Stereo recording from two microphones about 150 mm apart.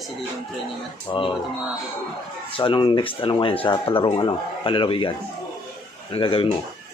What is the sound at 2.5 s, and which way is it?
Speech, 35° left (ahead or behind).